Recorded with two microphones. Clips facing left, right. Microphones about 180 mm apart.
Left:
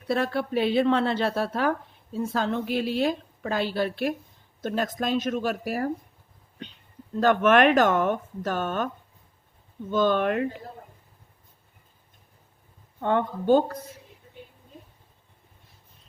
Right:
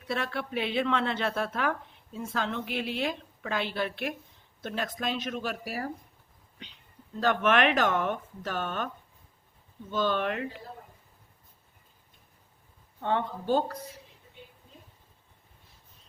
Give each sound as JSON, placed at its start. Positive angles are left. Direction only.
{"t": 0.1, "sound": "a woman's voice", "side_deg": 40}
{"t": 7.2, "sound": "speech", "side_deg": 50}
{"t": 9.9, "sound": "speech", "side_deg": 50}
{"t": 13.0, "sound": "speech", "side_deg": 50}